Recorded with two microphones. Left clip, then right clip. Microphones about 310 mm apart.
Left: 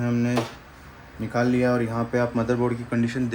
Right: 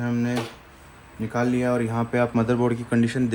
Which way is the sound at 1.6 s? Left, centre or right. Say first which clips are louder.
Left 1 dB; right.